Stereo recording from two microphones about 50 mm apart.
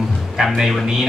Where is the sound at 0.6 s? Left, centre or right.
Centre.